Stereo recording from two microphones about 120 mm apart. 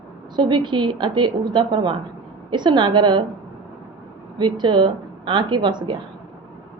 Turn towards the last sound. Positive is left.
turn(degrees=-40)  # may be behind; listen again after turning